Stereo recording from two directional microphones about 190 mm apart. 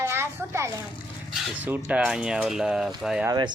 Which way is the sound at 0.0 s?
15° right (ahead or behind).